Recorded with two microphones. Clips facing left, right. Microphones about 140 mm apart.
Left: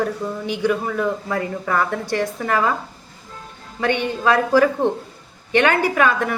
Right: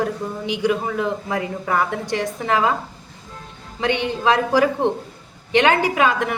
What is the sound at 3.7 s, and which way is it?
A woman's voice, 20° right (ahead or behind).